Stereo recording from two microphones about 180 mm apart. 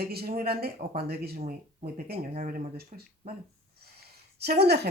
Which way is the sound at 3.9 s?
65° right (ahead or behind).